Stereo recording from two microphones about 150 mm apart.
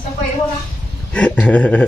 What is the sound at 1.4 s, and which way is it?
Speech, 10° left (ahead or behind).